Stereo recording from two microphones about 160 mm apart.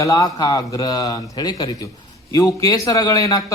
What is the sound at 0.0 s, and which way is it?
Speech, 20° left (ahead or behind).